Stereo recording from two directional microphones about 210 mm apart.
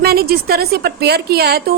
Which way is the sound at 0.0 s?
45° right (ahead or behind).